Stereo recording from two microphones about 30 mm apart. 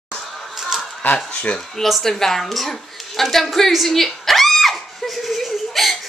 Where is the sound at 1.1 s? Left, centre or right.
Left.